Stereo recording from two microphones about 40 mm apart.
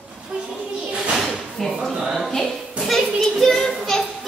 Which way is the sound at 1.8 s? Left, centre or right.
Centre.